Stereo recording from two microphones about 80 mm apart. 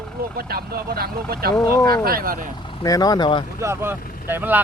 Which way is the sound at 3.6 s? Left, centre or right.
Right.